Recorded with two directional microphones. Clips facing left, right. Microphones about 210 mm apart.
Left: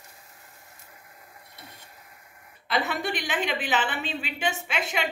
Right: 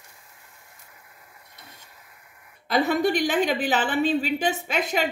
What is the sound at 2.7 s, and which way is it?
A woman's voice, 40° right (ahead or behind).